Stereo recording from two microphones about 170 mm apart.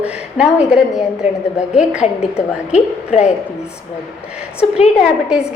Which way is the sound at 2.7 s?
40° left (ahead or behind).